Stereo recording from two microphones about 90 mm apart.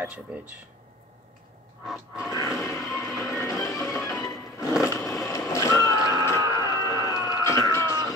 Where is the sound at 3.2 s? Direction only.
30° left (ahead or behind).